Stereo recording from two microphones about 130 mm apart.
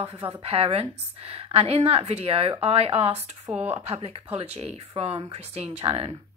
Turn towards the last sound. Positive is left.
turn(degrees=-45)  # may be behind; listen again after turning